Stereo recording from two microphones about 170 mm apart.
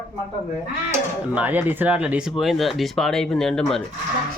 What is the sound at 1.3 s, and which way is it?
Speech, 10° right (ahead or behind).